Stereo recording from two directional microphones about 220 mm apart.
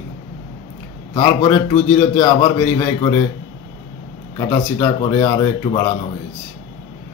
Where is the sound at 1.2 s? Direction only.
10° left (ahead or behind).